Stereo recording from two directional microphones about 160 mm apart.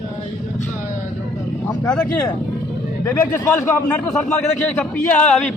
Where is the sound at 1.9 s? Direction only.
5° left (ahead or behind).